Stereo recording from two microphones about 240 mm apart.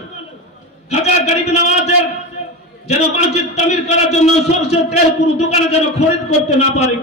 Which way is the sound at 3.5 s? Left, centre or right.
Left.